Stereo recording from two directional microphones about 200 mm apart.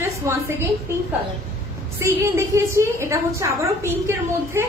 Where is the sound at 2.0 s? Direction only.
15° right (ahead or behind).